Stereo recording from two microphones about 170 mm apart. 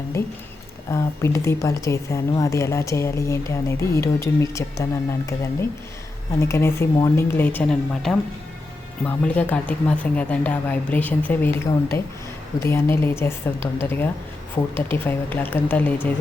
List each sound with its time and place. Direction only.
0.9 s a woman's voice: 15° left (ahead or behind)